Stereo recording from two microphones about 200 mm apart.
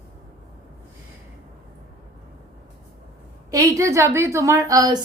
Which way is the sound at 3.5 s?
15° right (ahead or behind).